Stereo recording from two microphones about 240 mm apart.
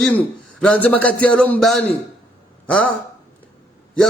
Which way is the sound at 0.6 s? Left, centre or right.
Centre.